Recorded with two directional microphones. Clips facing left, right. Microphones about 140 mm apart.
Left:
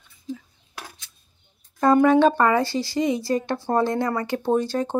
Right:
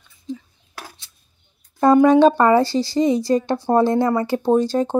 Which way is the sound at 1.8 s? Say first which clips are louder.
Right 4 dB; 25° right (ahead or behind).